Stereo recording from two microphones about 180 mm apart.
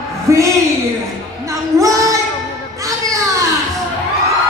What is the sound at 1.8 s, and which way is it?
Child singing, 15° right (ahead or behind).